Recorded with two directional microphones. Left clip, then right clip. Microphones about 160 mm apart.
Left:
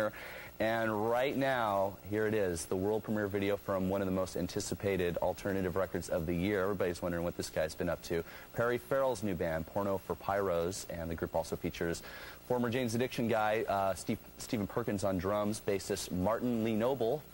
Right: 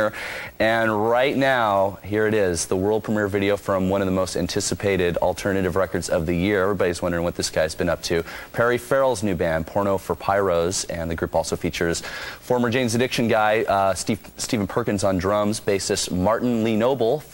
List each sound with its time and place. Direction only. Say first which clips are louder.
0.6 s speech: right 13 dB; 15° right (ahead or behind)